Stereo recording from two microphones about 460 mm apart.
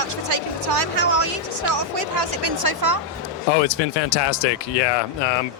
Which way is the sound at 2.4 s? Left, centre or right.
Right.